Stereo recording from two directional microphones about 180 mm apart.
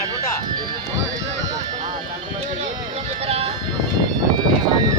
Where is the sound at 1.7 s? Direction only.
45° right (ahead or behind).